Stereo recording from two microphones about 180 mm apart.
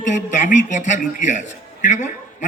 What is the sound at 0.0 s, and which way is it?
A man's voice, 40° left (ahead or behind).